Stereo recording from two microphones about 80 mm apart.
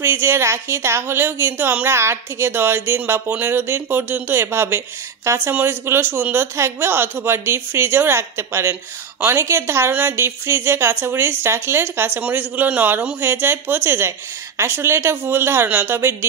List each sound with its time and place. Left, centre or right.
0.0 s a woman's voice: right